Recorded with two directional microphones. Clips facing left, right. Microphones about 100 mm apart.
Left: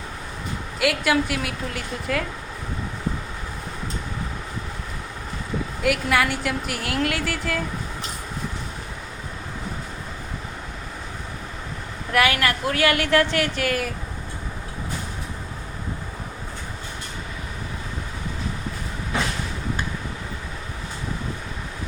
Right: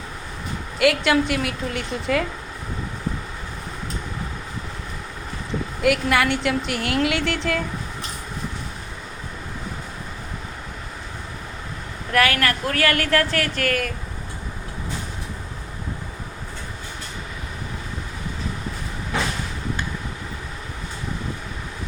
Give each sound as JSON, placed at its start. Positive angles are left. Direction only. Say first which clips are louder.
{"t": 0.8, "sound": "a woman's voice", "louder": "right 3 dB", "side_deg": 0}
{"t": 5.8, "sound": "a woman's voice", "louder": "right 2 dB", "side_deg": 0}
{"t": 12.1, "sound": "a woman's voice", "louder": "right 1 dB", "side_deg": 15}